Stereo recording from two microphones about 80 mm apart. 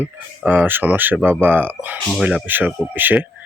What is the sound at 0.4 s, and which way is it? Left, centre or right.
Speech, right.